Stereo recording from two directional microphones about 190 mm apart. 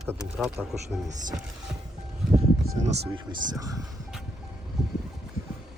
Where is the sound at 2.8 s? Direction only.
35° right (ahead or behind).